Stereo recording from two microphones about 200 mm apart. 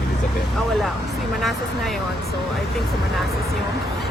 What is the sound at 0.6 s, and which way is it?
Speech, centre (ahead or behind).